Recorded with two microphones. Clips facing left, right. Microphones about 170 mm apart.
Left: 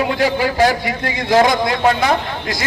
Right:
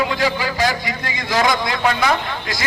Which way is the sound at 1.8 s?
35° left (ahead or behind).